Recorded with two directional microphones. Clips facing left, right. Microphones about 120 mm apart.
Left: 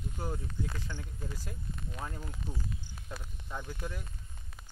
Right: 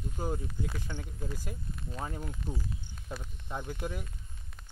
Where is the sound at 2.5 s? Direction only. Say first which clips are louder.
Right 2 dB; 15° right (ahead or behind).